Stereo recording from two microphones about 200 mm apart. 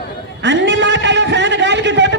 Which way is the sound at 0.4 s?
60° right (ahead or behind).